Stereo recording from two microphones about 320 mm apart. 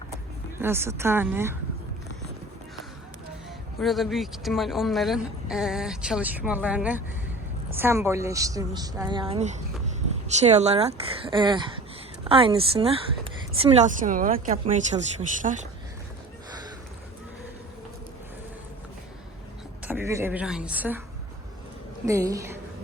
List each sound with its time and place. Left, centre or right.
0.6 s a woman's voice: centre
3.8 s a woman's voice: centre; by 15.6 s right
19.8 s a woman's voice: centre
22.0 s a woman's voice: centre